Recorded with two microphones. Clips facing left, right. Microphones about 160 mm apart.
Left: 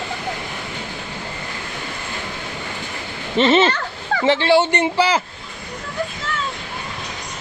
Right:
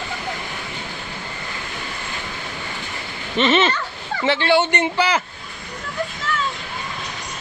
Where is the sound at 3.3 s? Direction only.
35° left (ahead or behind).